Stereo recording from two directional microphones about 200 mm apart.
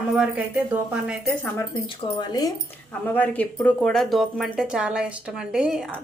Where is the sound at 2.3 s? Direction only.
20° left (ahead or behind).